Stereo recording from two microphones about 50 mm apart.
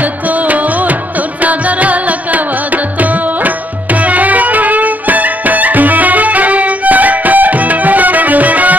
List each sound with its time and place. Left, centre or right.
0.3 s music: right